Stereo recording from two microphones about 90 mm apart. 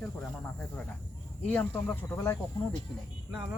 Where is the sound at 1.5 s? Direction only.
20° left (ahead or behind).